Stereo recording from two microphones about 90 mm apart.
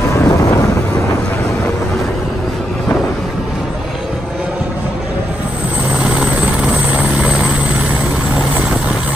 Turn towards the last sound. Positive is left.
turn(degrees=-15)  # may be behind; listen again after turning